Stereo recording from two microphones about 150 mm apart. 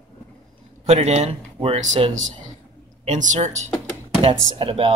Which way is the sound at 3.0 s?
55° right (ahead or behind).